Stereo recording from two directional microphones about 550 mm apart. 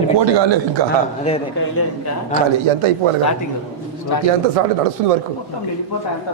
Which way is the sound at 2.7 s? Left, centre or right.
Right.